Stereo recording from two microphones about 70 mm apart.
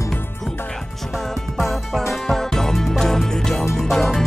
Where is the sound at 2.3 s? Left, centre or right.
Centre.